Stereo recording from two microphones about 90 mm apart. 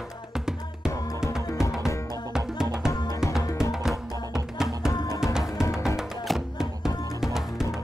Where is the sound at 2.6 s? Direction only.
5° right (ahead or behind).